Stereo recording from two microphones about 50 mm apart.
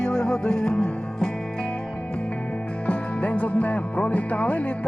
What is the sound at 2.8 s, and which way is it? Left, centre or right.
Speech, left.